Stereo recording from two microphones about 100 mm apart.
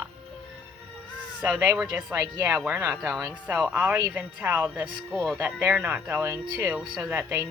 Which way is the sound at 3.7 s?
15° right (ahead or behind).